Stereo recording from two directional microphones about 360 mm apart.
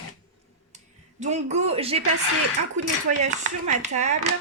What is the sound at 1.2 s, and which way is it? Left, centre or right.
Speech, centre.